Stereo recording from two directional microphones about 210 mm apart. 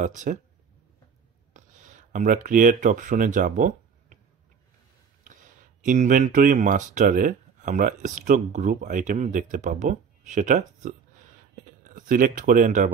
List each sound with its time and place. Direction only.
0.0 s speech: 35° right (ahead or behind)
1.5 s speech: 35° right (ahead or behind)
5.2 s speech: 40° right (ahead or behind)
11.8 s speech: 40° right (ahead or behind)